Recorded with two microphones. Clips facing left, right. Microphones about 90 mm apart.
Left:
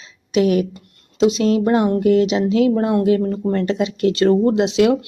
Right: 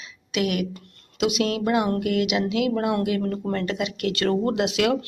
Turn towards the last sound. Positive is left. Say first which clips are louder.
# left 7 dB
turn(degrees=25)  # may be behind; listen again after turning